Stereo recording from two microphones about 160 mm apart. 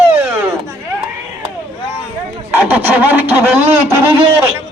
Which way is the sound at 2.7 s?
10° right (ahead or behind).